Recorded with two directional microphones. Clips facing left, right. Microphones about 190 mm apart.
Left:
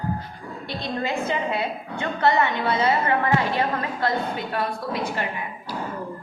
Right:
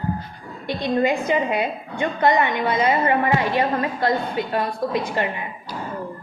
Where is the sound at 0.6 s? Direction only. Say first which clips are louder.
Right 8 dB; 15° right (ahead or behind).